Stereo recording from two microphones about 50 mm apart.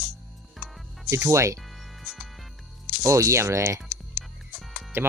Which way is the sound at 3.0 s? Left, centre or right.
Right.